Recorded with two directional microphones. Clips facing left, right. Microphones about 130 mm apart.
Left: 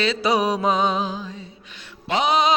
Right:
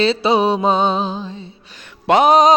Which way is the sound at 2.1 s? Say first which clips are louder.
Right 8 dB; 50° right (ahead or behind).